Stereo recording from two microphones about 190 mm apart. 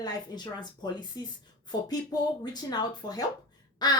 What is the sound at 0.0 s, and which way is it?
A woman's voice, 20° left (ahead or behind).